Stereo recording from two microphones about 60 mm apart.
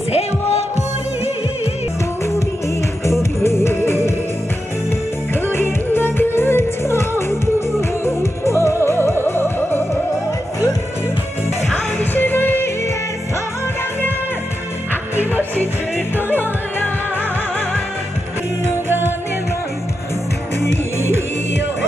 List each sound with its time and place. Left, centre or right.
3.1 s music: left
5.3 s music: left
12.0 s music: left
16.2 s music: left
18.9 s music: right